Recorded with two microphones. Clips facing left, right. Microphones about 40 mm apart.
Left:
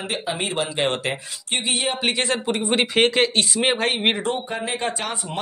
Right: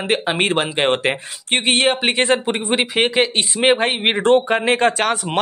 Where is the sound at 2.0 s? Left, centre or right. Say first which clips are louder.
Right 5 dB; right.